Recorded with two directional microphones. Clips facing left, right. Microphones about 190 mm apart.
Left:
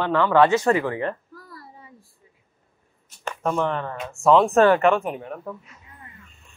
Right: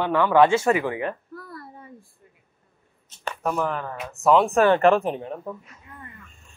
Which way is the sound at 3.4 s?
5° right (ahead or behind).